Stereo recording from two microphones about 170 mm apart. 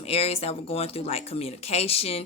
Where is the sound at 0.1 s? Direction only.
35° left (ahead or behind).